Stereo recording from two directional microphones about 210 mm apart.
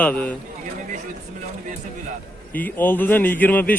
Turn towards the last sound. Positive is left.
turn(degrees=10)  # may be behind; listen again after turning